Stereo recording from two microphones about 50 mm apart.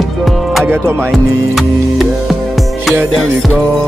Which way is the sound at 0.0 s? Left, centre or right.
Centre.